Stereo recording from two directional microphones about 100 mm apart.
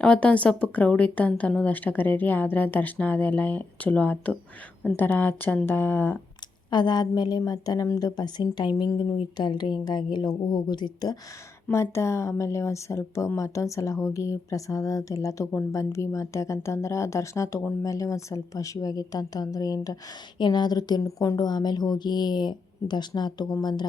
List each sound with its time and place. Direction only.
0.0 s speech: 10° left (ahead or behind)
6.7 s speech: 50° left (ahead or behind)
11.7 s speech: 30° left (ahead or behind); by 23.8 s 45° left (ahead or behind)